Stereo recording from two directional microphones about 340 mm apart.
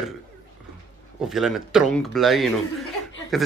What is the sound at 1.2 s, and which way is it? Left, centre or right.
A man's voice, centre.